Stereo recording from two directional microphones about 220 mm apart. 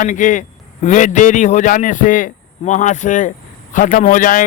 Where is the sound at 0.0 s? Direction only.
35° left (ahead or behind).